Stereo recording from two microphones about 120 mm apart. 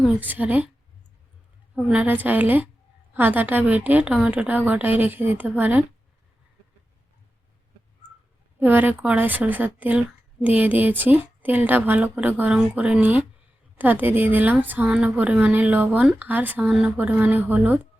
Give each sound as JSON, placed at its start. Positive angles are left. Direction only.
{"t": 0.2, "sound": "a woman's voice", "side_deg": -15}
{"t": 1.7, "sound": "a woman's voice", "side_deg": -10}
{"t": 8.5, "sound": "a woman's voice", "side_deg": -15}